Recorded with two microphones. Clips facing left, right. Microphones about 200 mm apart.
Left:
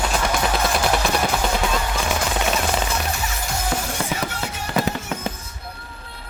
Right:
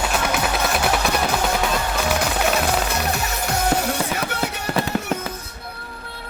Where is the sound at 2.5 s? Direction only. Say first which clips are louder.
Right 2 dB; 65° right (ahead or behind).